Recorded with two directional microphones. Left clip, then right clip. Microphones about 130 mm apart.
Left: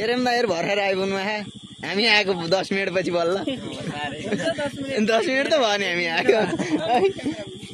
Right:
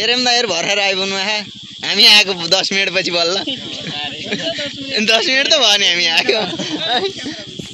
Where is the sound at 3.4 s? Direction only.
15° left (ahead or behind).